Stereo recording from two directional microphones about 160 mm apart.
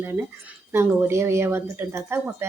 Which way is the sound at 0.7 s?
15° right (ahead or behind).